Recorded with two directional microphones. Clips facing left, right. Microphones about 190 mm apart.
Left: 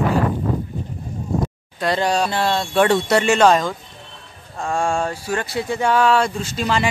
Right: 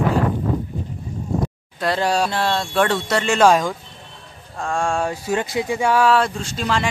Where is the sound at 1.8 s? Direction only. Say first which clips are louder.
Even; centre (ahead or behind).